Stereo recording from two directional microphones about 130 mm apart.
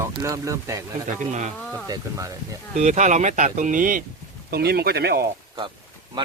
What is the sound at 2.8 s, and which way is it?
Speech, 65° right (ahead or behind).